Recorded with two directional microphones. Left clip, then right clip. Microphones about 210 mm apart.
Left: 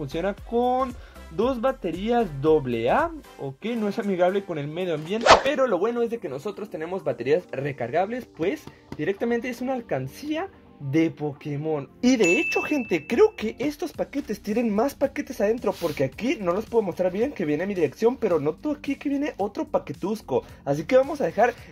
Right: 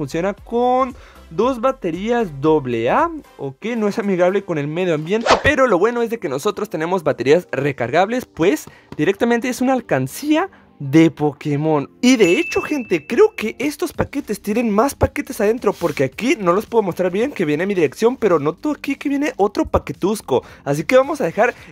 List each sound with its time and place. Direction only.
0.0 s speech: 35° right (ahead or behind)
5.2 s speech: centre (ahead or behind)
5.5 s speech: 45° right (ahead or behind)
12.0 s speech: 35° right (ahead or behind)